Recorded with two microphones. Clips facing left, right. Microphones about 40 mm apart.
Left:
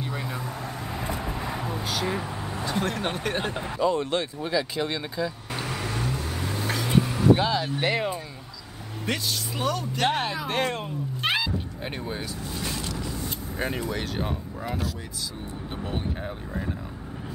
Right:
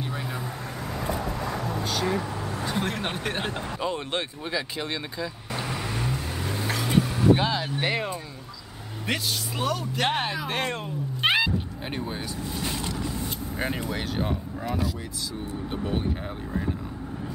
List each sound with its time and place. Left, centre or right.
0.0 s vehicle: centre
1.1 s vehicle: left
1.7 s vehicle: centre
2.7 s speech: centre
3.8 s speech: right; by 5.7 s centre
5.8 s vehicle: centre
7.3 s speech: centre
11.2 s cat: right
12.6 s vehicle: right
13.6 s speech: centre
15.7 s vehicle: centre